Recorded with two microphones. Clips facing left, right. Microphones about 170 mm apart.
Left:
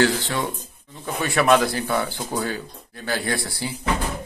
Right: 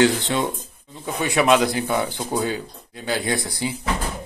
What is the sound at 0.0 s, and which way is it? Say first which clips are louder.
Speech: right 2 dB; 20° right (ahead or behind).